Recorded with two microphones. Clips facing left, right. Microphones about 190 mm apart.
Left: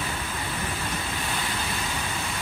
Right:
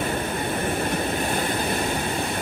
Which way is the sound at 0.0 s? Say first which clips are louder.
Right 7 dB; 55° right (ahead or behind).